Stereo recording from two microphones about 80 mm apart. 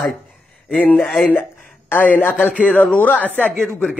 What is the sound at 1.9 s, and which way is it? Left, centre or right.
A man's voice, left.